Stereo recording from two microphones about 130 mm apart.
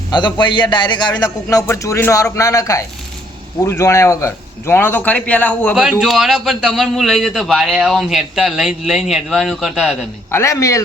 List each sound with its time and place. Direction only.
0.1 s a man's voice: 35° left (ahead or behind)
1.5 s speech: 20° left (ahead or behind)
5.7 s a man's voice: 5° right (ahead or behind)
10.3 s speech: 25° left (ahead or behind)